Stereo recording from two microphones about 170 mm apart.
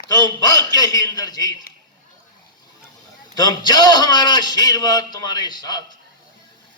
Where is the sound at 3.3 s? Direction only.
25° left (ahead or behind).